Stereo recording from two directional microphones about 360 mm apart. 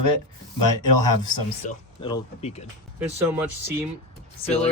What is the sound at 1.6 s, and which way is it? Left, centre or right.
Speech, centre.